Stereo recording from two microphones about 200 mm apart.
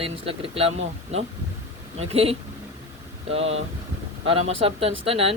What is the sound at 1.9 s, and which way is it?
Speech, 30° right (ahead or behind).